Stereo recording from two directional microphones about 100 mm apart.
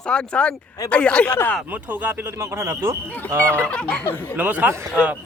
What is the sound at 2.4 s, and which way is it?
Speech, 30° right (ahead or behind).